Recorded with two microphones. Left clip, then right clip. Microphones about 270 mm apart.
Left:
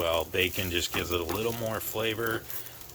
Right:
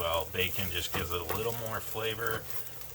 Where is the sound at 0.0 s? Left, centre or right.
Left.